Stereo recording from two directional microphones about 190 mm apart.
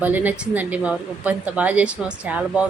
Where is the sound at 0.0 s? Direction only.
10° right (ahead or behind).